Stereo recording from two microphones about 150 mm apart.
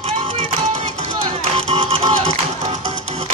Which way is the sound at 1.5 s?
45° right (ahead or behind).